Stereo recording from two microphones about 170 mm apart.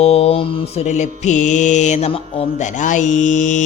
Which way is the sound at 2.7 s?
45° left (ahead or behind).